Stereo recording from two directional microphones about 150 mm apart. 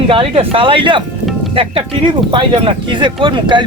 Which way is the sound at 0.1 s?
35° right (ahead or behind).